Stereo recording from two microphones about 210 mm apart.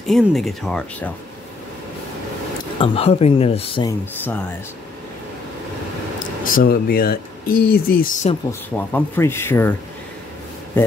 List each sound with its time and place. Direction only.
0.0 s speech: centre (ahead or behind)
2.8 s speech: 25° left (ahead or behind)
6.1 s speech: 40° left (ahead or behind)
8.5 s speech: 10° left (ahead or behind)